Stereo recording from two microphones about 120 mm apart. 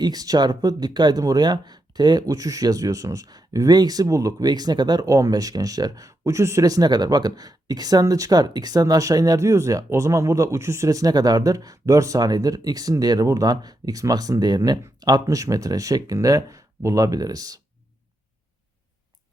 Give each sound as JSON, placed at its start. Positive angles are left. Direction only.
{"t": 0.0, "sound": "speech", "side_deg": -30}